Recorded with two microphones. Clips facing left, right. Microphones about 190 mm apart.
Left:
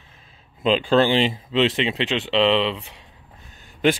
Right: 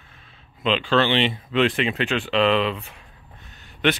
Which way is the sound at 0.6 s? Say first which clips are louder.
Left 3 dB; 40° left (ahead or behind).